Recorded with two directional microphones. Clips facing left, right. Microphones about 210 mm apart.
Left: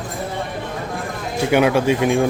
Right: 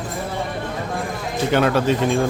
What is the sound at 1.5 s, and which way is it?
Speech, 10° left (ahead or behind).